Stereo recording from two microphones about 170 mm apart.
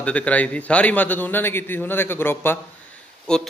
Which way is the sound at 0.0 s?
10° left (ahead or behind).